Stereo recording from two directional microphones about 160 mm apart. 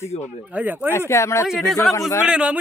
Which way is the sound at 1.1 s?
15° left (ahead or behind).